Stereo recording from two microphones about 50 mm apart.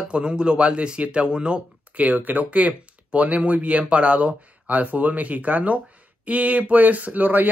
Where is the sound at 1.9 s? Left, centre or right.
Right.